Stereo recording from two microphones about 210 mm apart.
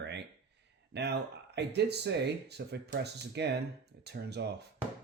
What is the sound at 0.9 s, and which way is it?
Speech, 55° right (ahead or behind).